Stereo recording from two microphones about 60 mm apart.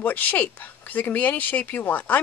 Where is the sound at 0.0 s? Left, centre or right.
Left.